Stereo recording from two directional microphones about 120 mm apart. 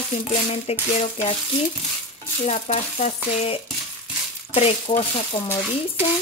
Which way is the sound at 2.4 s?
70° left (ahead or behind).